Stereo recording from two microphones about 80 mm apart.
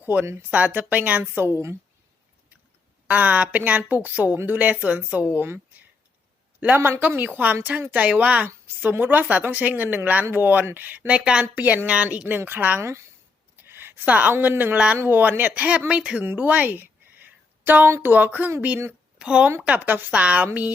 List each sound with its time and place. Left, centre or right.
0.0 s a woman's voice: right
3.1 s a woman's voice: centre
6.6 s a woman's voice: right
11.2 s a woman's voice: centre
11.4 s a woman's voice: right
12.8 s a woman's voice: right; by 16.2 s centre
16.2 s a sound: right
18.0 s a woman's voice: right
19.2 s a woman's voice: centre